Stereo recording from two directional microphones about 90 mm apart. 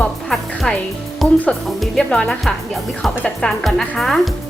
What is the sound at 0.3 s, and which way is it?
Music, 5° left (ahead or behind).